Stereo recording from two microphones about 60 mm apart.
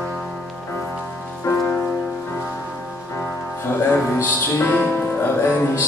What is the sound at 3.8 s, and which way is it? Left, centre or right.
Music, left.